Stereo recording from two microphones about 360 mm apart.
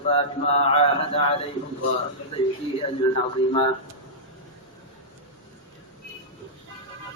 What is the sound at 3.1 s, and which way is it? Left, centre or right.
Speech, centre.